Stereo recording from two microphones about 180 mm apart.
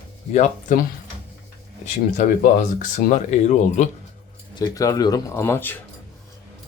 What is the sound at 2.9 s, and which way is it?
Speech, 45° left (ahead or behind).